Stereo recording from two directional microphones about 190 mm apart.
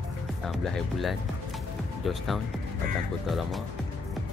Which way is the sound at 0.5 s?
Centre (ahead or behind).